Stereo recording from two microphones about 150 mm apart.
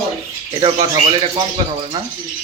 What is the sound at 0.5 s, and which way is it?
Speech, 35° right (ahead or behind).